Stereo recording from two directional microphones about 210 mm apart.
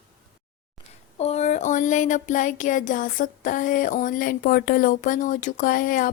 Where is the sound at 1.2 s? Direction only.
30° left (ahead or behind).